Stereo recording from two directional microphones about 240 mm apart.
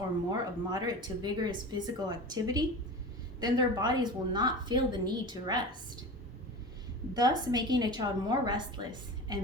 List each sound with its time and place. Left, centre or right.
0.3 s speech: centre
7.1 s speech: centre